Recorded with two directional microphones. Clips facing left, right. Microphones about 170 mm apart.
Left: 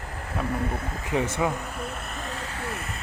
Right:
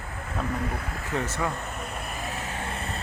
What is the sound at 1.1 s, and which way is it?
Speech, 15° left (ahead or behind).